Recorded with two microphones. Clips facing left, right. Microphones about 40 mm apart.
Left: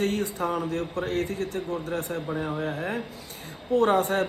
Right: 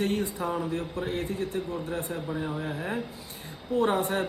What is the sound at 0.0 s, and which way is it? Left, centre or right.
Speech, left.